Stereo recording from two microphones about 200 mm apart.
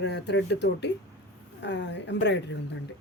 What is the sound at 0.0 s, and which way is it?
A woman's voice, 60° left (ahead or behind).